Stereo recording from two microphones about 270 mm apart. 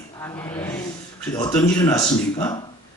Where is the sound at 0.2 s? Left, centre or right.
Centre.